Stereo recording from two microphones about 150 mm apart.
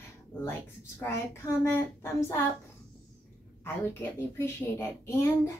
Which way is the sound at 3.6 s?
15° left (ahead or behind).